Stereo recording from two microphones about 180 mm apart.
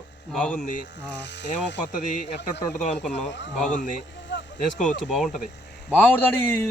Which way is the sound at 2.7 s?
40° left (ahead or behind).